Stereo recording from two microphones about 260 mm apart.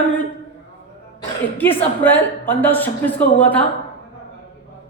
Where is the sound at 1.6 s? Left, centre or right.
Centre.